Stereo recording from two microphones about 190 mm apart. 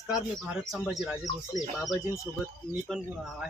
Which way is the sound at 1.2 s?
Centre (ahead or behind).